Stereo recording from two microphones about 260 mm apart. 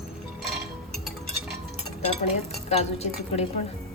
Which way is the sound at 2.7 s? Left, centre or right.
Left.